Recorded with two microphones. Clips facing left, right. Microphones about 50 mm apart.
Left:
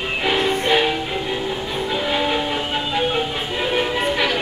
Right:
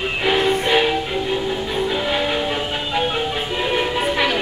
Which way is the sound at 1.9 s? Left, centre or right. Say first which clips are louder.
Left 3 dB; centre.